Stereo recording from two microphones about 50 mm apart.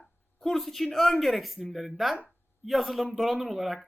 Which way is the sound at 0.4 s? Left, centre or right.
Centre.